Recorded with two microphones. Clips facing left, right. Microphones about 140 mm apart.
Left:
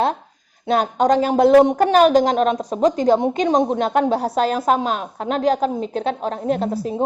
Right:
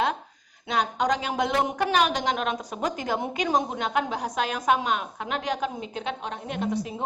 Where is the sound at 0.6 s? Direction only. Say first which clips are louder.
Left 8 dB; 45° left (ahead or behind).